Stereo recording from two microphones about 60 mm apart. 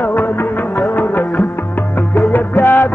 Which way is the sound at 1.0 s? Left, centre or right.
Left.